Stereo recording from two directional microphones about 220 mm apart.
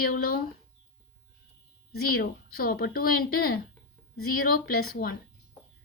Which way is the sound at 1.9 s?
45° left (ahead or behind).